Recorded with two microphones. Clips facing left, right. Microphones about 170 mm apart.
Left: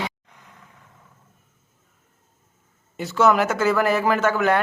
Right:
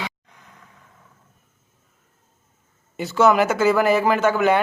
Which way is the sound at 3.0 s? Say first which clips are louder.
Right 2 dB; centre (ahead or behind).